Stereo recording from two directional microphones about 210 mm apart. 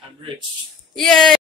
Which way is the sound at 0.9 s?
Centre (ahead or behind).